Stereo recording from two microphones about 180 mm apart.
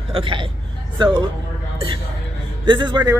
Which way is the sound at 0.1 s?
30° right (ahead or behind).